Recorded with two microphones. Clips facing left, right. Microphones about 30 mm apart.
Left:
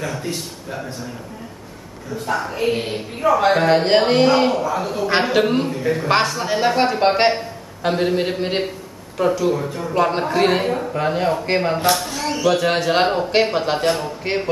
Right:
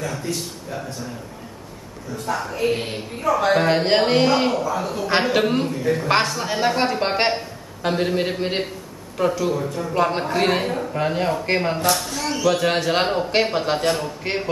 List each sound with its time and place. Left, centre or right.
0.2 s a man's voice: left
2.2 s a man's voice: centre
3.3 s a man's voice: centre
3.5 s a man's voice: centre